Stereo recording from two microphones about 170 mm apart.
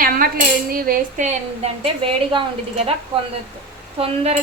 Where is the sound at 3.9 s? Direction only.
40° right (ahead or behind).